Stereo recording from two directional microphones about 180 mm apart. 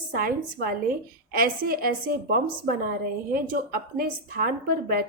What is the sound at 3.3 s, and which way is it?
Speech, 55° right (ahead or behind).